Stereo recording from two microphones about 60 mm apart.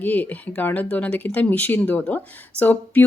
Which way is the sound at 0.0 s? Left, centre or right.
Left.